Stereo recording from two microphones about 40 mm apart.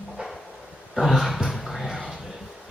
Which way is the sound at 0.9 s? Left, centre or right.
Centre.